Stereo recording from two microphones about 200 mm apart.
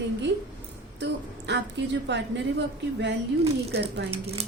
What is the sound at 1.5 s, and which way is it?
Speech, 60° right (ahead or behind).